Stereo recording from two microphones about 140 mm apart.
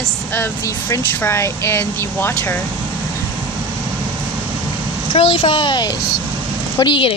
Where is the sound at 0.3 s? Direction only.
20° left (ahead or behind).